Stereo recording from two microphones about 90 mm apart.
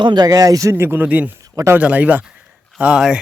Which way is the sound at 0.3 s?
45° right (ahead or behind).